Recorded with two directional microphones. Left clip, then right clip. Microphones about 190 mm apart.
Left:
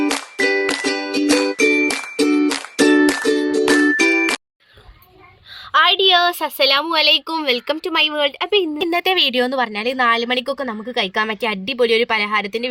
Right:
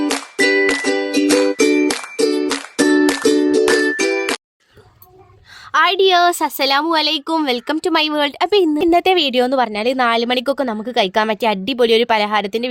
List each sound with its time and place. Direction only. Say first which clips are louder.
0.0 s music: right 2 dB; 5° right (ahead or behind)
5.7 s a woman's voice: even; 60° right (ahead or behind)
8.9 s speech: even; 45° right (ahead or behind)